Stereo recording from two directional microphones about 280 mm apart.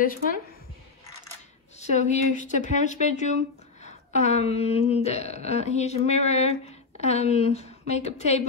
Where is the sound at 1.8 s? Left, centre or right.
Left.